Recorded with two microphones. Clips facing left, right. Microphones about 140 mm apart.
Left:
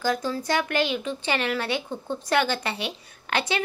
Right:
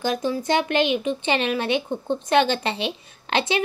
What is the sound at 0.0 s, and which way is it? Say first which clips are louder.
Speech: right 2 dB; 20° right (ahead or behind).